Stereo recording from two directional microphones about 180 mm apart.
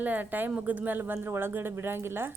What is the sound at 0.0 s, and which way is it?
Speech, 10° right (ahead or behind).